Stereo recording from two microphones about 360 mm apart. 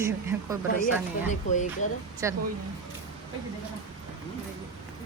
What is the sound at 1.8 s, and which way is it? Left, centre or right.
Speech, centre.